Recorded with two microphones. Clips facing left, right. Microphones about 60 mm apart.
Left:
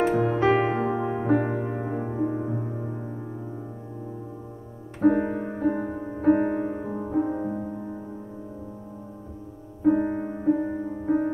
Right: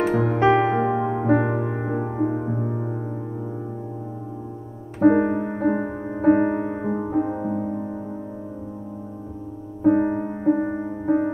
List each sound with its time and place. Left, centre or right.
0.1 s music: right
2.0 s music: right
5.0 s music: right
9.8 s music: right
11.1 s music: right